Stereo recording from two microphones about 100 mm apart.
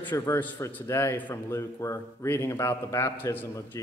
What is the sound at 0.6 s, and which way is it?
A man's voice, 20° left (ahead or behind).